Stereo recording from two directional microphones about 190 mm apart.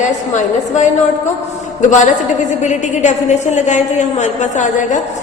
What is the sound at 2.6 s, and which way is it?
A woman's voice, 40° left (ahead or behind).